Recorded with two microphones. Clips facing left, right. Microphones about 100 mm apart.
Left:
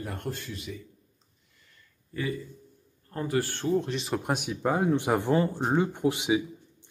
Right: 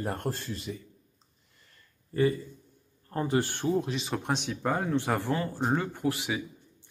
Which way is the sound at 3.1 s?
25° right (ahead or behind).